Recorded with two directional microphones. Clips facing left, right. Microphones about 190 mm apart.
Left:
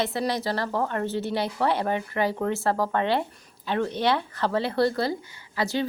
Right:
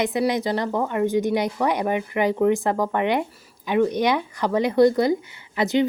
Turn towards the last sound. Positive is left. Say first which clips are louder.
# right 6 dB
turn(degrees=-20)  # may be behind; listen again after turning